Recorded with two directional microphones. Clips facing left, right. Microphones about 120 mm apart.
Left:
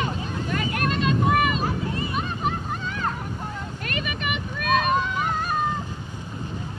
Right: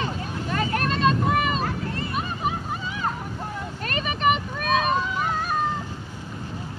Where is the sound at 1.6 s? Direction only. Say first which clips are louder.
Left 2 dB; 15° left (ahead or behind).